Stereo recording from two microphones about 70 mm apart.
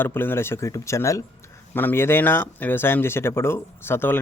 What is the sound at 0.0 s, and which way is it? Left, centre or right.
Speech, left.